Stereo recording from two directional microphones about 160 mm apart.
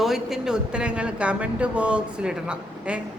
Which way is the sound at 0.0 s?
Centre (ahead or behind).